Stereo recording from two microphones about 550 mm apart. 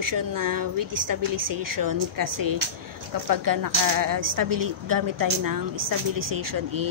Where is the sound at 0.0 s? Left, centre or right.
Right.